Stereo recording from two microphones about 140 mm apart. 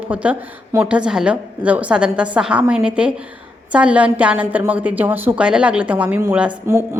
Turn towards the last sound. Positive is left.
turn(degrees=-20)  # may be behind; listen again after turning